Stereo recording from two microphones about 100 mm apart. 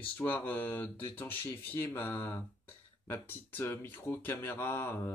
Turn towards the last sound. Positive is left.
turn(degrees=25)  # may be behind; listen again after turning